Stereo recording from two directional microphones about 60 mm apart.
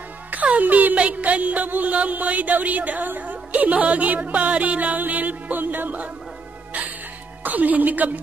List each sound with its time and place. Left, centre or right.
0.3 s music: right
7.4 s music: right